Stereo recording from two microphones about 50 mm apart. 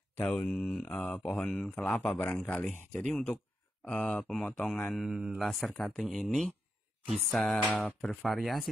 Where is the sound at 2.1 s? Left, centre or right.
Left; by 4.9 s centre.